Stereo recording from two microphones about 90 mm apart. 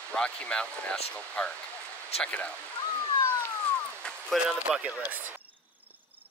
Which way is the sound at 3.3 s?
15° left (ahead or behind).